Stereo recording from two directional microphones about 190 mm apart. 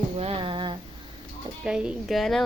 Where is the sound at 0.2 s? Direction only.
30° right (ahead or behind).